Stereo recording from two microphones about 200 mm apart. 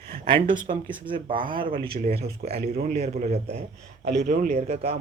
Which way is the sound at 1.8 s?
50° right (ahead or behind).